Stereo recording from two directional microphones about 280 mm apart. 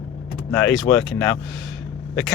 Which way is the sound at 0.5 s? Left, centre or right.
Centre.